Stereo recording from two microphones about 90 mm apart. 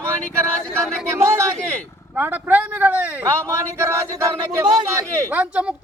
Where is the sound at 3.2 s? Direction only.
30° right (ahead or behind).